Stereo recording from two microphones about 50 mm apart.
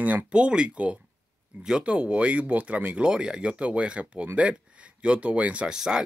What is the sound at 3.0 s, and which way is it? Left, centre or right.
Speech, centre.